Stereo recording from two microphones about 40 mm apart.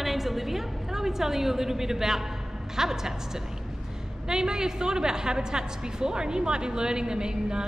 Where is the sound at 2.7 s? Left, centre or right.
Centre.